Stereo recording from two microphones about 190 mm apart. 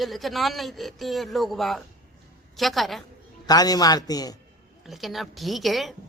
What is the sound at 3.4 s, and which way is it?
Speech, 20° left (ahead or behind).